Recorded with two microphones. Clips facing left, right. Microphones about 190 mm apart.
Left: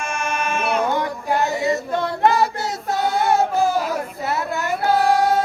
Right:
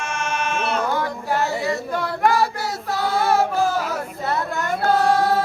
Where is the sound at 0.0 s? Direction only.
10° left (ahead or behind).